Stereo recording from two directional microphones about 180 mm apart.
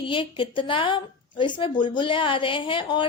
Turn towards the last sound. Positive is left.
turn(degrees=30)  # may be behind; listen again after turning